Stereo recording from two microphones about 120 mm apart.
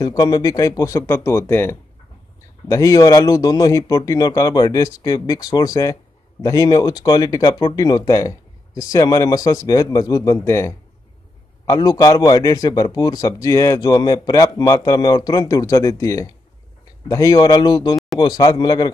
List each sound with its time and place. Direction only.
0.0 s speech: 30° left (ahead or behind)
2.7 s a man's voice: 30° left (ahead or behind)